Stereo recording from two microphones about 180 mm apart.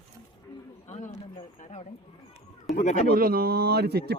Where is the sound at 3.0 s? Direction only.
55° right (ahead or behind).